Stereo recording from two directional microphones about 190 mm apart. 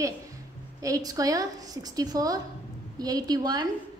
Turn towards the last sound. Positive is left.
turn(degrees=-20)  # may be behind; listen again after turning